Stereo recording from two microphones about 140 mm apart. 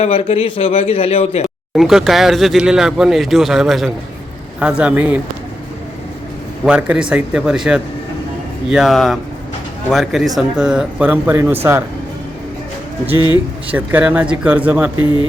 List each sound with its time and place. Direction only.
0.0 s a man's voice: 45° left (ahead or behind)
1.7 s speech: centre (ahead or behind)
6.7 s speech: 5° right (ahead or behind)
13.1 s speech: 30° left (ahead or behind)
13.7 s speech: 10° right (ahead or behind)